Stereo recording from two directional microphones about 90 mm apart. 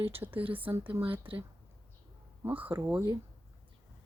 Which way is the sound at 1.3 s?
80° right.